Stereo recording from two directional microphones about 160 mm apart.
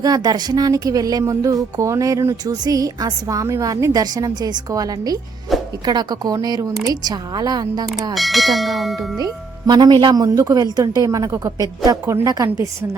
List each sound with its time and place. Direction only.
0.0 s speech: 25° right (ahead or behind)
8.1 s speech: centre (ahead or behind)
9.1 s speech: 25° right (ahead or behind)